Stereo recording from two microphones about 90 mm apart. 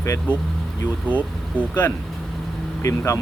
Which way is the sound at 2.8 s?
35° left (ahead or behind).